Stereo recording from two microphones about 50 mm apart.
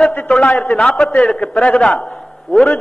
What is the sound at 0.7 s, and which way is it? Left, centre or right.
A man's voice, centre.